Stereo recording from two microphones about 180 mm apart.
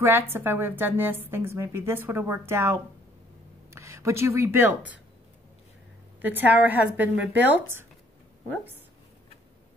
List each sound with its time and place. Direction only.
0.0 s a woman's voice: 10° right (ahead or behind)
6.2 s a woman's voice: 10° right (ahead or behind)